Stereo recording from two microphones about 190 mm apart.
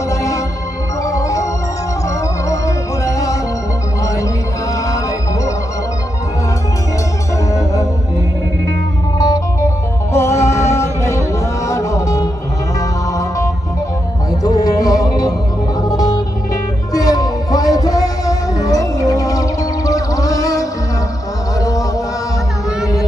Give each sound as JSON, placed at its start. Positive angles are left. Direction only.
{"t": 0.1, "sound": "music", "side_deg": 15}
{"t": 1.0, "sound": "organ", "side_deg": 15}
{"t": 2.5, "sound": "music", "side_deg": 15}
{"t": 7.5, "sound": "music", "side_deg": 15}
{"t": 9.1, "sound": "music", "side_deg": 20}
{"t": 14.4, "sound": "music", "side_deg": 20}